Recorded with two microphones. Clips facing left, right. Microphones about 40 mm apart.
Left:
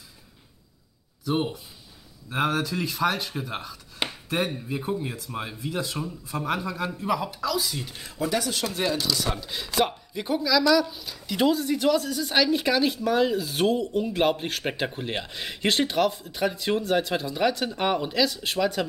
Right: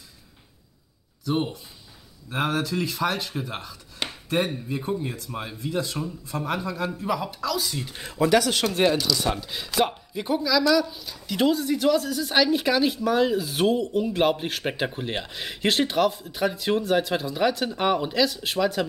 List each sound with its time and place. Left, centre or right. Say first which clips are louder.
1.2 s a woman's voice: even; centre
8.2 s speech: right 7 dB; right
8.8 s speech: right 6 dB; right
9.3 s a woman's voice: right 1 dB; centre